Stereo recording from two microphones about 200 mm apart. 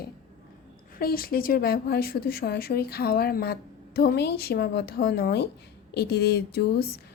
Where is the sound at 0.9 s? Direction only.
45° left (ahead or behind).